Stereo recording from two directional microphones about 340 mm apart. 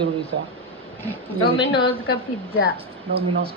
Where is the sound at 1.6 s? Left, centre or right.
Left.